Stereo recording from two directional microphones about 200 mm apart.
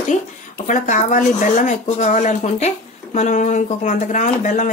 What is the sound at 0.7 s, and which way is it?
A woman's voice, 40° left (ahead or behind).